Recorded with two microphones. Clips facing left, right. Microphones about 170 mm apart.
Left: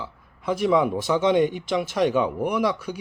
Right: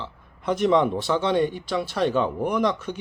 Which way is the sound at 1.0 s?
15° left (ahead or behind).